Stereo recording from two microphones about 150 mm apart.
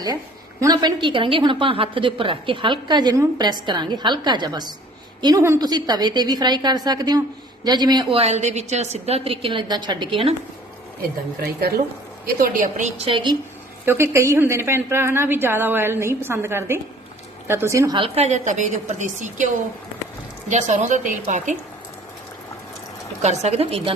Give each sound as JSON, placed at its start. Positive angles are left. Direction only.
{"t": 0.6, "sound": "a woman's voice", "side_deg": -25}
{"t": 8.2, "sound": "a woman's voice", "side_deg": -50}
{"t": 12.2, "sound": "a woman's voice", "side_deg": -65}
{"t": 13.0, "sound": "a woman's voice", "side_deg": -35}
{"t": 13.8, "sound": "a woman's voice", "side_deg": -15}
{"t": 17.9, "sound": "a woman's voice", "side_deg": -40}
{"t": 20.5, "sound": "a woman's voice", "side_deg": -55}
{"t": 23.2, "sound": "a woman's voice", "side_deg": -50}